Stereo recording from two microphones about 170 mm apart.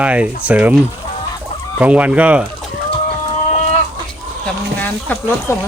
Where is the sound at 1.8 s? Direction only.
10° right (ahead or behind).